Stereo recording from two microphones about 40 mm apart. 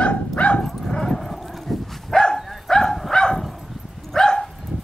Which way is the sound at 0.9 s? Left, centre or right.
Centre.